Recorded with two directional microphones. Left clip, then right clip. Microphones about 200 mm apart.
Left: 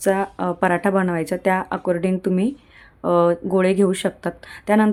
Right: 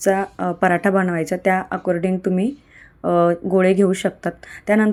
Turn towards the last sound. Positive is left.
turn(degrees=-5)  # may be behind; listen again after turning